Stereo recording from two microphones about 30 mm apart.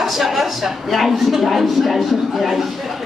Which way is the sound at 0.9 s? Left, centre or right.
Centre.